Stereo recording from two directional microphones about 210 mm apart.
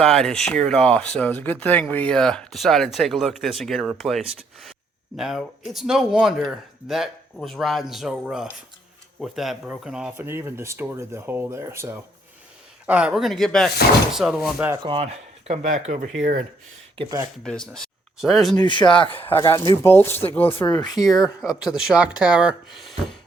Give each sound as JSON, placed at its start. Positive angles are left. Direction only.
{"t": 0.0, "sound": "speech", "side_deg": 0}
{"t": 14.8, "sound": "speech", "side_deg": -30}
{"t": 17.0, "sound": "speech", "side_deg": -15}
{"t": 17.4, "sound": "speech", "side_deg": 5}
{"t": 18.6, "sound": "speech", "side_deg": 20}
{"t": 21.2, "sound": "speech", "side_deg": 0}